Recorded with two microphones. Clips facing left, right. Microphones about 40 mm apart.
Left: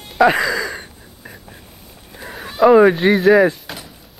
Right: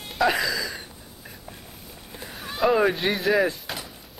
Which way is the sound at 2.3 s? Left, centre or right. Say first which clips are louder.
Left 10 dB; centre.